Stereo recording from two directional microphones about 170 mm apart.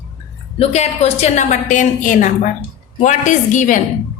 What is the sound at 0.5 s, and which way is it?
A woman's voice, 40° left (ahead or behind).